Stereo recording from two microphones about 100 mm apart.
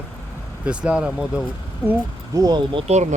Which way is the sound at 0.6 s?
10° right (ahead or behind).